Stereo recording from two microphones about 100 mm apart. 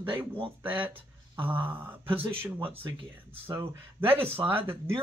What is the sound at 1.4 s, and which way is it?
Speech, 20° right (ahead or behind).